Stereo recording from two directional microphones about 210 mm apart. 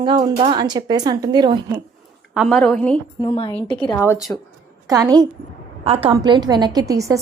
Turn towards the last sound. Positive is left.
turn(degrees=-15)  # may be behind; listen again after turning